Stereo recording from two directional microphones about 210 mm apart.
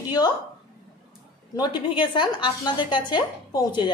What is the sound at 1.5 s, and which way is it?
A woman's voice, 20° left (ahead or behind).